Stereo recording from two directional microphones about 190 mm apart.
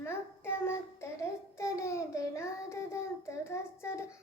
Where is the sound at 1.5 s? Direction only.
15° left (ahead or behind).